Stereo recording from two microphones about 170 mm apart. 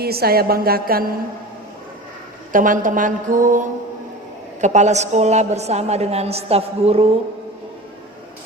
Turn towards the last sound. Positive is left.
turn(degrees=-35)  # may be behind; listen again after turning